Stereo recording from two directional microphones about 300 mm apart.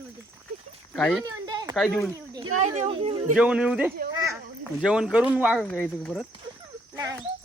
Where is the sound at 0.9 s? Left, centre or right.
Centre.